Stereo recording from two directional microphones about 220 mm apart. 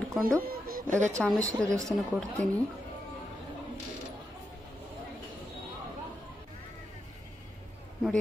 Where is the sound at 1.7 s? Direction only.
15° right (ahead or behind).